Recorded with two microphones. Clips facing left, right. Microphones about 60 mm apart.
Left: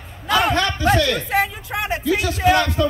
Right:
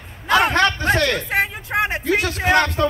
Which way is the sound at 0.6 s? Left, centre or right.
Right.